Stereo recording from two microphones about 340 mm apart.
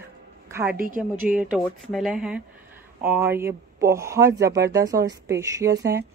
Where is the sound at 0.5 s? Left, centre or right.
Centre.